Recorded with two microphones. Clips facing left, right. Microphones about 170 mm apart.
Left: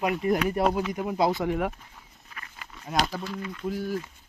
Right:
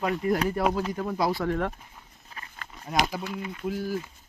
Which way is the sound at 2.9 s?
10° right (ahead or behind).